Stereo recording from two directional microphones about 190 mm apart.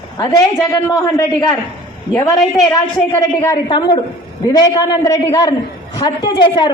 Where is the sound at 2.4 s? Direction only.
Centre (ahead or behind).